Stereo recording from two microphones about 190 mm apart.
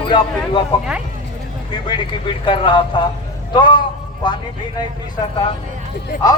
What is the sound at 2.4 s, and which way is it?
A man's voice, 25° left (ahead or behind).